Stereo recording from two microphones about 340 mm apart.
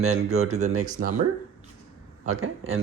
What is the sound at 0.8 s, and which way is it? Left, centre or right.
Speech, right.